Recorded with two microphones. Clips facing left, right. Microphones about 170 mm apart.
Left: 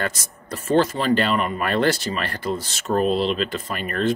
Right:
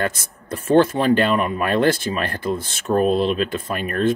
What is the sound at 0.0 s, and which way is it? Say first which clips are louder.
Speech: right 3 dB; 55° right (ahead or behind).